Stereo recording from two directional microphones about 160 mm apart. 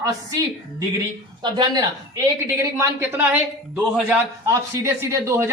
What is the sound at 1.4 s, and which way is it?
Speech, 25° right (ahead or behind).